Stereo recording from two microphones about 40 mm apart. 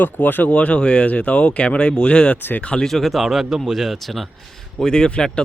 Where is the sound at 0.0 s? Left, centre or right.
Left.